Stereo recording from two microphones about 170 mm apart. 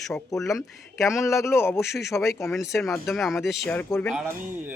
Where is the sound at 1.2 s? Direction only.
15° left (ahead or behind).